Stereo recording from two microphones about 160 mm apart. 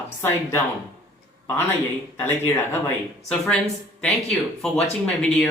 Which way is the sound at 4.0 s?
5° left (ahead or behind).